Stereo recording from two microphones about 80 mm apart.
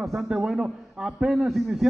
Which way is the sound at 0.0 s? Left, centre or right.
Centre.